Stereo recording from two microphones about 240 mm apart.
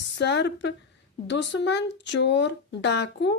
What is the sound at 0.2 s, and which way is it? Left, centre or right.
Speech, left.